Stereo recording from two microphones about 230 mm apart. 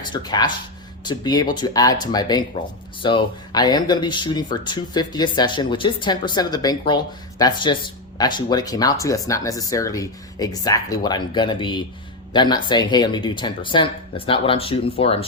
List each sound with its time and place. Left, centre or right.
0.1 s speech: centre